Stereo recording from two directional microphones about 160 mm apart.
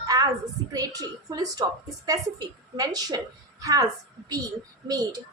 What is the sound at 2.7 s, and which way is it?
A woman's voice, 25° right (ahead or behind).